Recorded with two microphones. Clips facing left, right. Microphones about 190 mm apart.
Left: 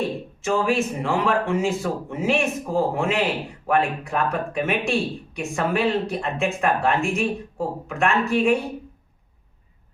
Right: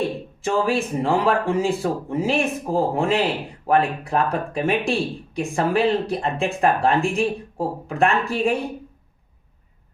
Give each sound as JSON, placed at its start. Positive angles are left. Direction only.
{"t": 0.4, "sound": "speech", "side_deg": -35}